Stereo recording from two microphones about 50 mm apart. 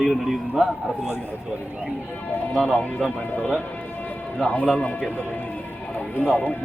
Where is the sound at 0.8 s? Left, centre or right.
Right.